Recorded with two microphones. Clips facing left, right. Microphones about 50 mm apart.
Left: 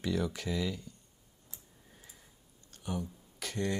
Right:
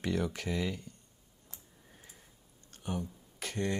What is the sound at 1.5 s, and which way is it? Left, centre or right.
Tick-tock, right.